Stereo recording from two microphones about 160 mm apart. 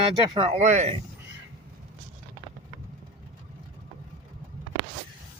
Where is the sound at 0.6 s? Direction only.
50° right (ahead or behind).